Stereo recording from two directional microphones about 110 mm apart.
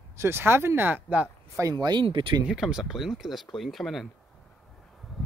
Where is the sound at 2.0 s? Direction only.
50° right (ahead or behind).